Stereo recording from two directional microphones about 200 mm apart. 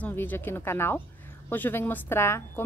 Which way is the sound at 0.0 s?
10° left (ahead or behind).